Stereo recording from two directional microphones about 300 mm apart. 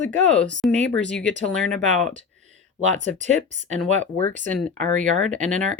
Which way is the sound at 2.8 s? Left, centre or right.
Right.